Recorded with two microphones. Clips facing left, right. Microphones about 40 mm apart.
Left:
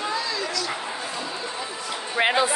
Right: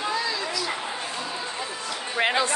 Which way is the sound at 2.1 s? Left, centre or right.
Centre.